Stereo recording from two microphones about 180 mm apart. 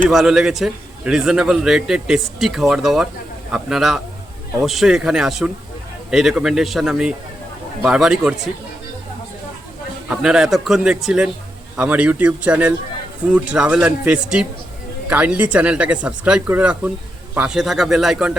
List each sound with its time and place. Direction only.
0.1 s a man's voice: centre (ahead or behind)
10.1 s a man's voice: 5° right (ahead or behind)